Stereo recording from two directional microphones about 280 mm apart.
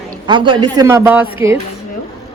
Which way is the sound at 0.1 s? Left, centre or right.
Centre.